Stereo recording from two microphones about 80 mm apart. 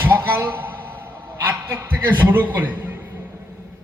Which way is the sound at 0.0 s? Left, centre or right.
Right.